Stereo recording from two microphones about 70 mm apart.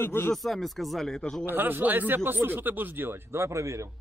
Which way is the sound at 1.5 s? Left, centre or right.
Right.